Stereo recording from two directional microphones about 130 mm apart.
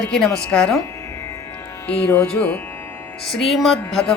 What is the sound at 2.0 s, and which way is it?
Speech, 10° left (ahead or behind).